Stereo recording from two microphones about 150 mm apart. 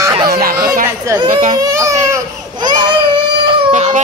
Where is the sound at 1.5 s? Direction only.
25° right (ahead or behind).